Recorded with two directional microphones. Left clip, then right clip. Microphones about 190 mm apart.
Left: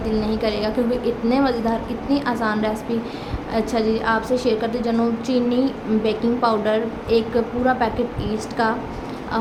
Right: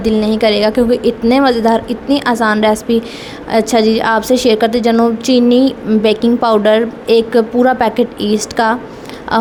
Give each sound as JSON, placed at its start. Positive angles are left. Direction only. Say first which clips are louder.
{"t": 0.0, "sound": "a woman's voice", "louder": "right 10 dB", "side_deg": -45}